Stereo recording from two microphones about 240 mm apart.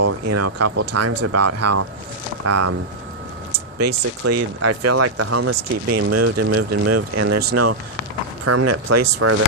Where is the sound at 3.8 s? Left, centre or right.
Right.